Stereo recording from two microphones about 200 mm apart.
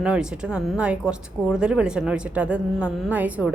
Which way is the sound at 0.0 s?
5° right (ahead or behind).